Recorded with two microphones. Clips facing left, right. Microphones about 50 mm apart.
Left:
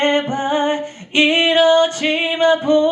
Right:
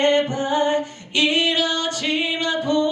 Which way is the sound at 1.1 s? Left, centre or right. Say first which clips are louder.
Left 6 dB; left.